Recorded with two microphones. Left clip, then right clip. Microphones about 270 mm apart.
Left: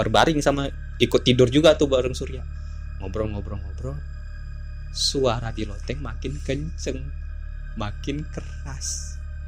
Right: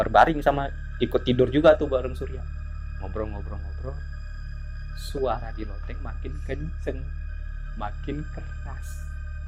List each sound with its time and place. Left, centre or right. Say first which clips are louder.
0.0 s speech: right 1 dB; left
5.2 s speech: left 4 dB; left